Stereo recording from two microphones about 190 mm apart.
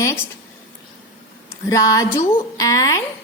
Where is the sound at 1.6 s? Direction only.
15° left (ahead or behind).